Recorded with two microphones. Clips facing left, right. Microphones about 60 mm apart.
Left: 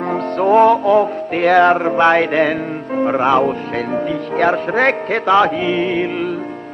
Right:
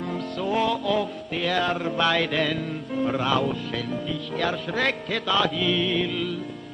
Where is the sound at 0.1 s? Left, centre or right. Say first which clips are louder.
Left 14 dB; left.